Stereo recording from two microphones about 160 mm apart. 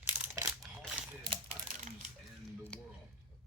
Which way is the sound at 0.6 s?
5° right (ahead or behind).